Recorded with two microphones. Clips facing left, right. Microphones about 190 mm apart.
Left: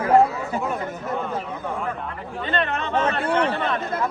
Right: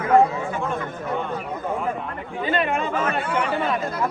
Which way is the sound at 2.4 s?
5° right (ahead or behind).